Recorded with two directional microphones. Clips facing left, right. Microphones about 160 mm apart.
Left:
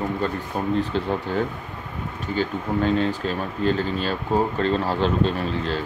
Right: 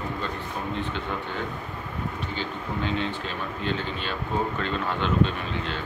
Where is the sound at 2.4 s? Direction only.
40° left (ahead or behind).